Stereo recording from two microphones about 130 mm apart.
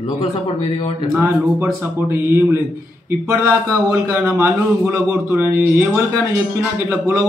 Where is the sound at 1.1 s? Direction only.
15° right (ahead or behind).